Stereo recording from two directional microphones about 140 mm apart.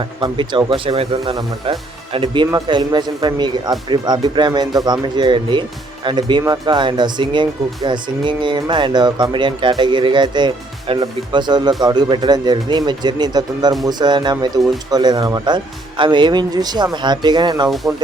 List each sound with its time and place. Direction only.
0.0 s speech: 35° right (ahead or behind)